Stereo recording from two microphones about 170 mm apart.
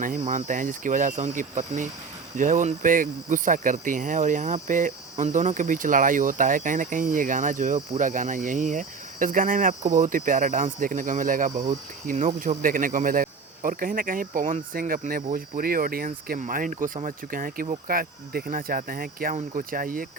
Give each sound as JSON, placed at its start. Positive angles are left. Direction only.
{"t": 0.0, "sound": "speech", "side_deg": -50}